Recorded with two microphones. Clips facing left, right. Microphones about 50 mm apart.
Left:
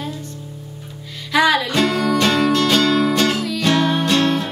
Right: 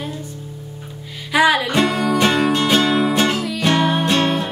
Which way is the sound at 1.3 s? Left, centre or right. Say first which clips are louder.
Right 1 dB; centre.